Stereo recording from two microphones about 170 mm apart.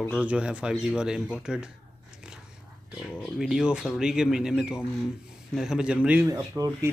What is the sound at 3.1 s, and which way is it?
Speech, centre (ahead or behind).